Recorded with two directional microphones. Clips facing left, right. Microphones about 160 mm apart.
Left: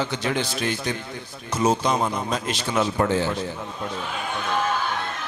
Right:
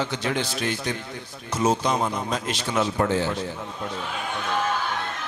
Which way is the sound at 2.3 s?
10° left (ahead or behind).